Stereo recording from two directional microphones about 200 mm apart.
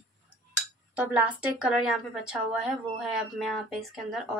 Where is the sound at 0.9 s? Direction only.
5° right (ahead or behind).